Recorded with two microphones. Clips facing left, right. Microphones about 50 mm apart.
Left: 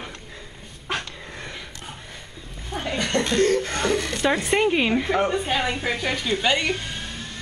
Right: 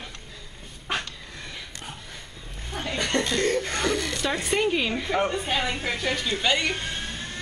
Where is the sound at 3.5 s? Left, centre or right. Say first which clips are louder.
Left 3 dB; centre.